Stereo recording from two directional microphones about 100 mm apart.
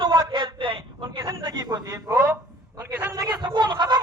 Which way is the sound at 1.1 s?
30° right (ahead or behind).